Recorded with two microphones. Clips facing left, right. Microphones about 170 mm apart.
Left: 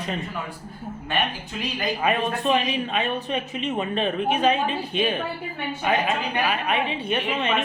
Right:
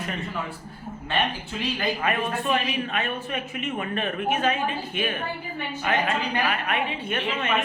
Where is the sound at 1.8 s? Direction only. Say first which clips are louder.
Left 4 dB; 15° left (ahead or behind).